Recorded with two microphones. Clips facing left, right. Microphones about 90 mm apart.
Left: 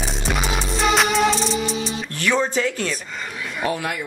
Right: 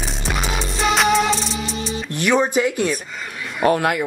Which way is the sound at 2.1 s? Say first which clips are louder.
Right 4 dB; 15° right (ahead or behind).